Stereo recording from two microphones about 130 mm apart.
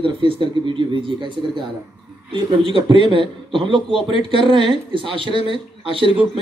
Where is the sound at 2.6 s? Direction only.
40° right (ahead or behind).